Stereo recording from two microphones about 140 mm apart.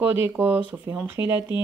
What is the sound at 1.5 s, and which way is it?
Speech, 30° left (ahead or behind).